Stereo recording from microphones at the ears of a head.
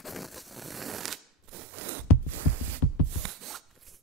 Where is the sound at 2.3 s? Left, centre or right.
Right.